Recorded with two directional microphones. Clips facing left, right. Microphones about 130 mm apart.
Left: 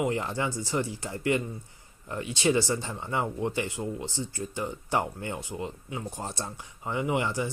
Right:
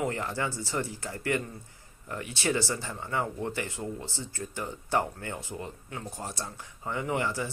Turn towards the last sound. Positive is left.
turn(degrees=20)  # may be behind; listen again after turning